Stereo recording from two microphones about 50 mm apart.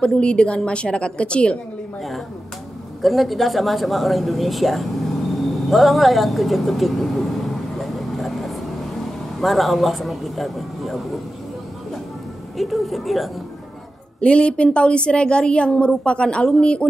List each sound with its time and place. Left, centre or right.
0.0 s a woman's voice: left
3.0 s a woman's voice: centre
12.5 s speech: centre
14.2 s a woman's voice: left